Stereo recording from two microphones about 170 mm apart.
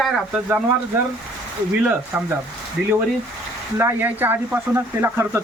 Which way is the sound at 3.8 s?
10° right (ahead or behind).